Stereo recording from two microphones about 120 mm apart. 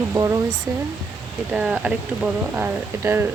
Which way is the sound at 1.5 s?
10° right (ahead or behind).